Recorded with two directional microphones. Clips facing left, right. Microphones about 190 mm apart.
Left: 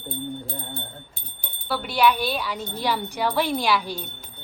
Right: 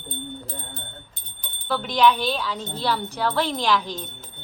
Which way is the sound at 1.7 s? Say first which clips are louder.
Right 1 dB; 10° left (ahead or behind).